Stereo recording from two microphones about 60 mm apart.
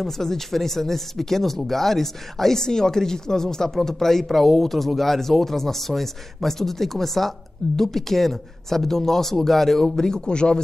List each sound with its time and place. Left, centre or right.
0.0 s speech: centre